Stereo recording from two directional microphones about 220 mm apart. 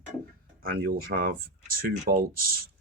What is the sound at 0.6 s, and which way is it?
Speech, 40° right (ahead or behind).